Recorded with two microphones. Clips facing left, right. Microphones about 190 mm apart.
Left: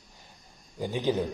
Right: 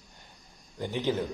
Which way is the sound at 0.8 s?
15° left (ahead or behind).